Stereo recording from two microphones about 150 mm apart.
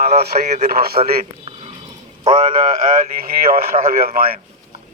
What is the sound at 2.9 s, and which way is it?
Speech, 70° right (ahead or behind).